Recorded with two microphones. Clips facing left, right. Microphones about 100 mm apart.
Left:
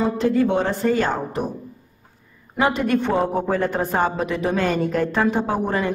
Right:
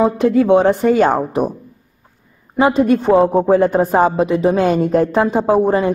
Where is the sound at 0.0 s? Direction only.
50° right (ahead or behind).